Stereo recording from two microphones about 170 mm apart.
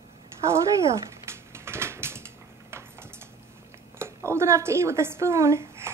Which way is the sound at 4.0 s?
15° right (ahead or behind).